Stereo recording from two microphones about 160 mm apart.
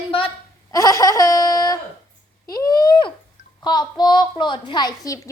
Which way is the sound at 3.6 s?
25° left (ahead or behind).